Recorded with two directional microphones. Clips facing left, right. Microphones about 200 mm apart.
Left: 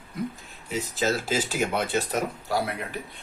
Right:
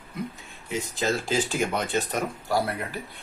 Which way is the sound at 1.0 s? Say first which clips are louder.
Even; 5° left (ahead or behind).